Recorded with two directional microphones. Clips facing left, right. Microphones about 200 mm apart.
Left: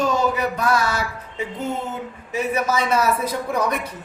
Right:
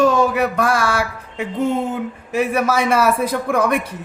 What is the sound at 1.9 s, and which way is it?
Speech, 60° right (ahead or behind).